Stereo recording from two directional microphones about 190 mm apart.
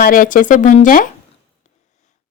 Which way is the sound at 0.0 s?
45° left (ahead or behind).